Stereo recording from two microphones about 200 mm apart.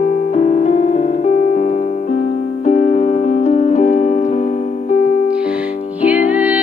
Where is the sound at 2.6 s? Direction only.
35° left (ahead or behind).